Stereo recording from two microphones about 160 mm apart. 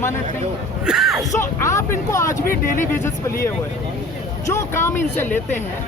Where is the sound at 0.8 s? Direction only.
5° right (ahead or behind).